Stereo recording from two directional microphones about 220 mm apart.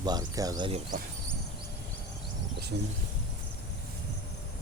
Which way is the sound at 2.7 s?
50° right (ahead or behind).